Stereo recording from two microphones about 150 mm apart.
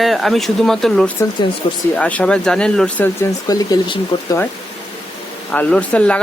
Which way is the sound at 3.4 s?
25° left (ahead or behind).